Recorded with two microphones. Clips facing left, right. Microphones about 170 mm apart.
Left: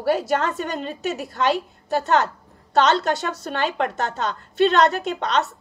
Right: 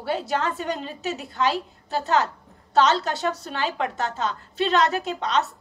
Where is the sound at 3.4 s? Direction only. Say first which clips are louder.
Left 3 dB; 55° left (ahead or behind).